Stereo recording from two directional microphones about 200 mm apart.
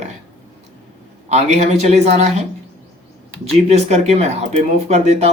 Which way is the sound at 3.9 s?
35° right (ahead or behind).